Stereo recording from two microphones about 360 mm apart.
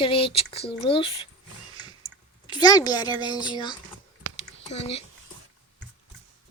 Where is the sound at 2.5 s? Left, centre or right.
Centre.